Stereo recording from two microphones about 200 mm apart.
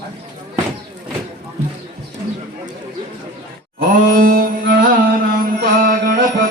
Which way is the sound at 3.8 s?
45° right (ahead or behind).